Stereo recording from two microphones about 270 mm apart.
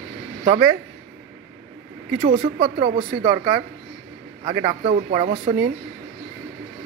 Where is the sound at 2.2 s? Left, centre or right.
Right.